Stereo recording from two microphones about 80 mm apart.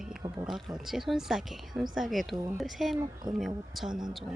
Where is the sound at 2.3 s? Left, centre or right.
Right.